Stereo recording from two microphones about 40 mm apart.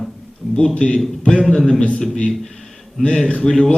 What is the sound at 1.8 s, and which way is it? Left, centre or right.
Speech, left.